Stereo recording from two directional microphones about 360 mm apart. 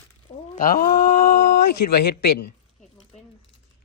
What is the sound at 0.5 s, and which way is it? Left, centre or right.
A man's voice, left.